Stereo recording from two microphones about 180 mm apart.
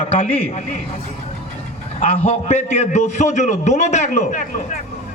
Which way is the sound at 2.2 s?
40° left (ahead or behind).